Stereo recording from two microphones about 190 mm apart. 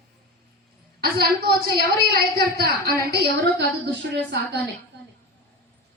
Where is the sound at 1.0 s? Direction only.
55° right (ahead or behind).